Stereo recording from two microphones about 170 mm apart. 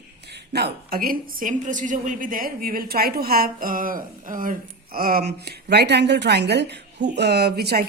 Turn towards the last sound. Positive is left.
turn(degrees=-70)  # may be behind; listen again after turning